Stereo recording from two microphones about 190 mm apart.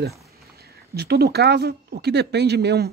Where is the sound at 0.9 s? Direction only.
55° right (ahead or behind).